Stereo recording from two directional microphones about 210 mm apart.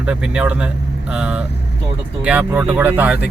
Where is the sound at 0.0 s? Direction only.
5° right (ahead or behind).